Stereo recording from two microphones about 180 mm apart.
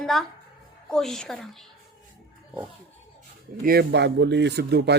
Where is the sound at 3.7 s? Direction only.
65° right (ahead or behind).